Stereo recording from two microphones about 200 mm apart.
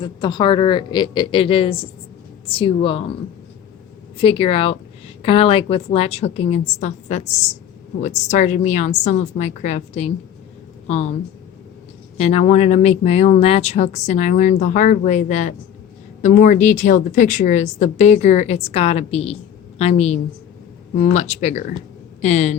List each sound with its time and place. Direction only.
0.0 s speech: 20° left (ahead or behind)
4.2 s speech: 30° left (ahead or behind)
12.1 s speech: 30° left (ahead or behind)